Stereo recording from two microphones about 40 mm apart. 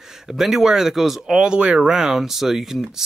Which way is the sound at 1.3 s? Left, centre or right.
Right.